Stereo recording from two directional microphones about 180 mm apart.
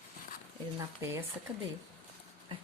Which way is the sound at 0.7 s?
15° right (ahead or behind).